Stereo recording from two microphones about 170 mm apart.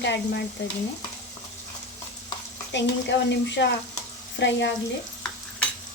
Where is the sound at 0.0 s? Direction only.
90° left.